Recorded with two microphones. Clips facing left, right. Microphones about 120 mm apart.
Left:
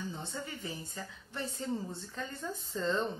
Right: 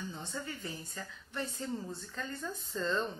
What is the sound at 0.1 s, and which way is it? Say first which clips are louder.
Speech: even; 25° left (ahead or behind).